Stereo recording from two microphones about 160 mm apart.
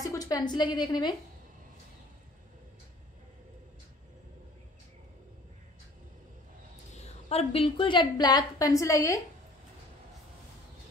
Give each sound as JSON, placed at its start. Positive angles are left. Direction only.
{"t": 0.0, "sound": "a woman's voice", "side_deg": 20}
{"t": 7.2, "sound": "a woman's voice", "side_deg": 40}